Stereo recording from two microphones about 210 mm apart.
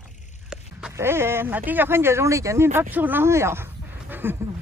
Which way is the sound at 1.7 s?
10° right (ahead or behind).